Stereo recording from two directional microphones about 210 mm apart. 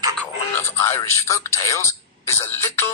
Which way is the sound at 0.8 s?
15° left (ahead or behind).